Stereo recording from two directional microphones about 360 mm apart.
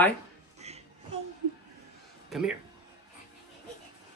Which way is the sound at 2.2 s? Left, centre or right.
Centre.